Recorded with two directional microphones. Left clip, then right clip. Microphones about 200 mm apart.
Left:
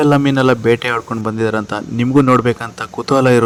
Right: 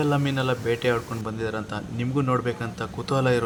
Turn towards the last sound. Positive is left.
turn(degrees=35)  # may be behind; listen again after turning